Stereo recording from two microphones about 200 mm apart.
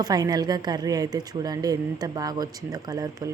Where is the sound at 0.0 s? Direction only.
20° right (ahead or behind).